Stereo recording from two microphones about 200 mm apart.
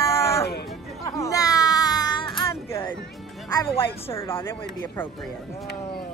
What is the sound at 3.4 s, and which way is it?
Speech, 20° left (ahead or behind).